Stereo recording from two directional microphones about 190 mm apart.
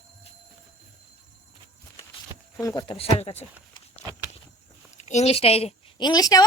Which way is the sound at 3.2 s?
35° left (ahead or behind).